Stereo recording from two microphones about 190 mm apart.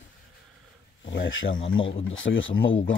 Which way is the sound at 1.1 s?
80° left.